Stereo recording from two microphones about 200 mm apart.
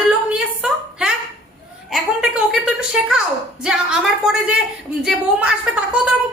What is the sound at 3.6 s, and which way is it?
A woman's voice, 5° right (ahead or behind).